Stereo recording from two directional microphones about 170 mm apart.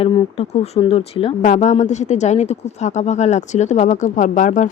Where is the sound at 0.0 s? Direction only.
35° left (ahead or behind).